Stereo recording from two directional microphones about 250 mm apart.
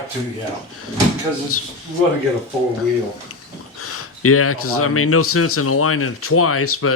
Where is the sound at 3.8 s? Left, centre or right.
Left.